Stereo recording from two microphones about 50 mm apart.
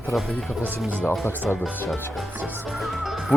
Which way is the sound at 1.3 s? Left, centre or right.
Left.